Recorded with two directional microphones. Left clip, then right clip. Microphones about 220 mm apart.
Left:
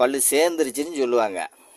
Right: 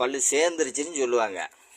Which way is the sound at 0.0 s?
55° left (ahead or behind).